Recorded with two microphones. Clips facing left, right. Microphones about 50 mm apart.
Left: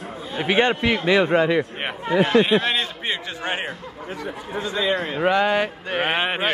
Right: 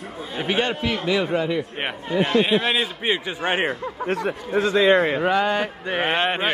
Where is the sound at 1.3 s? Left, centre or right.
Left.